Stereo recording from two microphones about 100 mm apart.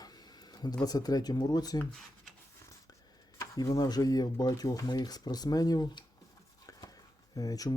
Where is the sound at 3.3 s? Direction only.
40° left (ahead or behind).